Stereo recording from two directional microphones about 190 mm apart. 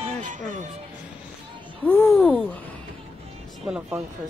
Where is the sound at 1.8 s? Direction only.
10° left (ahead or behind).